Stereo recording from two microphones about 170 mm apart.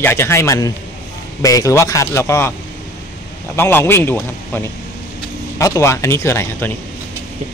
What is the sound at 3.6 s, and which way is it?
A man's voice, 15° left (ahead or behind).